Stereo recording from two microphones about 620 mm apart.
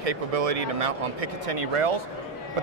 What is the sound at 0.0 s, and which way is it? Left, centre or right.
A man's voice, right.